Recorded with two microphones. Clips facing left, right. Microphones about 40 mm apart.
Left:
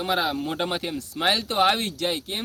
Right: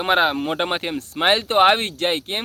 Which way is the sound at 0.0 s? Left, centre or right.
Right.